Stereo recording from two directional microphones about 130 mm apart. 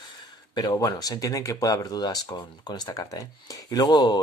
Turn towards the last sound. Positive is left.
turn(degrees=30)  # may be behind; listen again after turning